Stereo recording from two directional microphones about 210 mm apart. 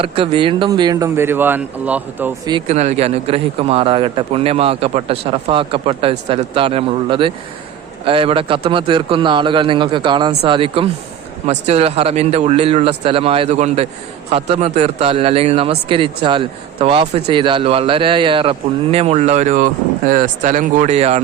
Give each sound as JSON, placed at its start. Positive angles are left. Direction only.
{"t": 0.0, "sound": "speech", "side_deg": -25}
{"t": 2.5, "sound": "a man's voice", "side_deg": -30}